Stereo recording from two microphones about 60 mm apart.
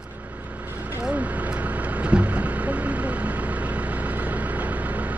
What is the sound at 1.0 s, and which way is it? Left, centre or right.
Vehicle, right.